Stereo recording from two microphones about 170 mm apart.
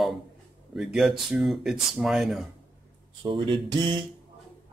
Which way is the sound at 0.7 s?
Centre (ahead or behind).